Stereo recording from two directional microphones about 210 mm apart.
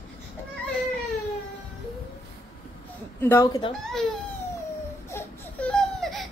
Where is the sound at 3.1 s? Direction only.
10° left (ahead or behind).